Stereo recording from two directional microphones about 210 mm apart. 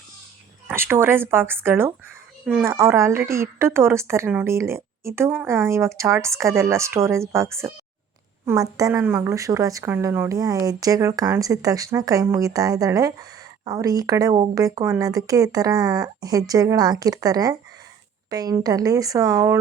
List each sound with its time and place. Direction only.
0.7 s a woman's voice: 10° right (ahead or behind)